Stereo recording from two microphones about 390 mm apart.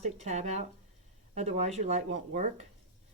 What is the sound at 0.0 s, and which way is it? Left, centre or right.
Speech, centre.